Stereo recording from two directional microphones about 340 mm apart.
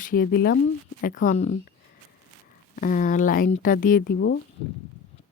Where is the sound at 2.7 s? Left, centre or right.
Left.